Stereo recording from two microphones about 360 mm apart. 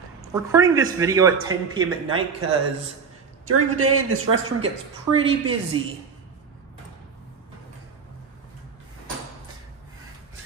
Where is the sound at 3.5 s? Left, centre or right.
Right.